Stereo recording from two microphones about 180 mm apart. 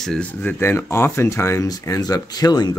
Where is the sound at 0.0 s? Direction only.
5° left (ahead or behind).